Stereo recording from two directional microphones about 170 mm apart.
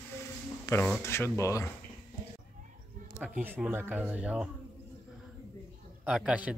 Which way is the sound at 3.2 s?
10° right (ahead or behind).